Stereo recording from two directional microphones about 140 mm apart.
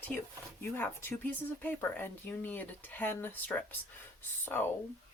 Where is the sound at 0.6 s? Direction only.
15° left (ahead or behind).